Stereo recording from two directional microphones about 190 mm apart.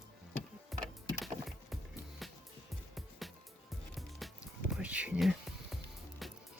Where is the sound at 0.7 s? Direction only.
Centre (ahead or behind).